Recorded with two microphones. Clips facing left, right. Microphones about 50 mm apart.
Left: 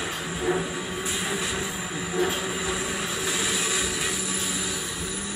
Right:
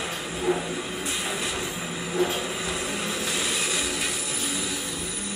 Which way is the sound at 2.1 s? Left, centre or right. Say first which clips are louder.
Even; centre.